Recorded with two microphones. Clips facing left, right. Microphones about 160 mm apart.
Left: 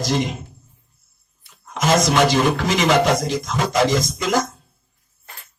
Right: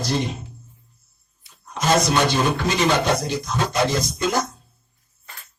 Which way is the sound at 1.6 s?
90° left.